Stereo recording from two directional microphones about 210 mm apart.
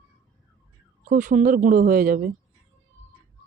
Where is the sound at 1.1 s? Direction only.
35° right (ahead or behind).